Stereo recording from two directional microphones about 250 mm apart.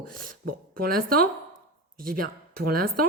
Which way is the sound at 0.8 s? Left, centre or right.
Right.